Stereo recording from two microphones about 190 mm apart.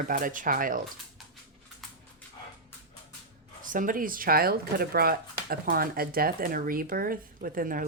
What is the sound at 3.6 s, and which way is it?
Speech, 45° right (ahead or behind).